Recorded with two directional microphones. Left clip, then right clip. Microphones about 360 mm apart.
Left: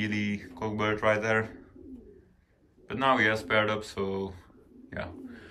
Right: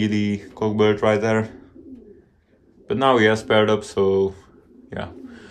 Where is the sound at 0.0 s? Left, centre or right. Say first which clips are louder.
Right 8 dB; centre.